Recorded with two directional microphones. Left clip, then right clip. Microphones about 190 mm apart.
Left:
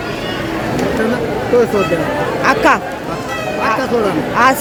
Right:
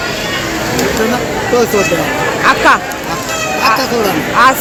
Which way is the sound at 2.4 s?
30° left (ahead or behind).